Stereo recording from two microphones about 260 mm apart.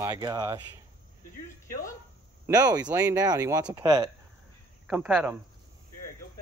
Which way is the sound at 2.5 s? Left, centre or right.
Centre.